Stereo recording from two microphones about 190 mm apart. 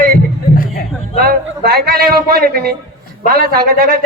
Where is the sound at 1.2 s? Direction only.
55° right (ahead or behind).